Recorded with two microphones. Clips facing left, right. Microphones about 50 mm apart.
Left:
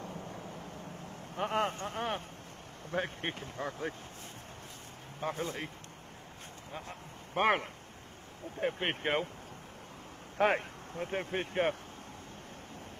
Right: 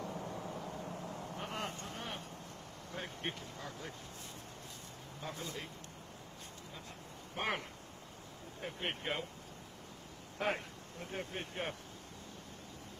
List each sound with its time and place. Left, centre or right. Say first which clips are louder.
0.1 s vehicle: right 1 dB; right
1.3 s speech: left 12 dB; left
5.2 s speech: left 8 dB; left
6.7 s a sound: left 6 dB; left
8.5 s speech: left 8 dB; left
10.3 s speech: left 8 dB; left